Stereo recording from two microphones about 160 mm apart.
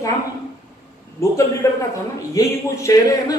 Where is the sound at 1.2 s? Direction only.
20° left (ahead or behind).